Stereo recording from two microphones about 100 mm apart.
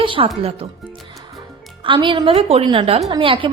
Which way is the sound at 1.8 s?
55° right (ahead or behind).